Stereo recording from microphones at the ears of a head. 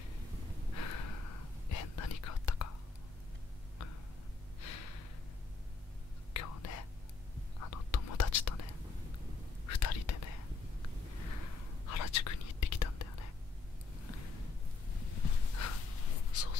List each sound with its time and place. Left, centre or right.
0.7 s whispering: left
4.6 s gasp: left
6.3 s whispering: left
15.3 s a sound: left